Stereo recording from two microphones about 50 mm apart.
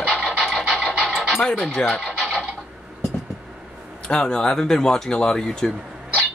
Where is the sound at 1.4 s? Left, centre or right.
Centre.